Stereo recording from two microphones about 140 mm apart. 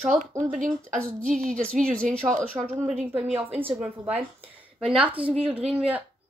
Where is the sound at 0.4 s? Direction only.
65° right (ahead or behind).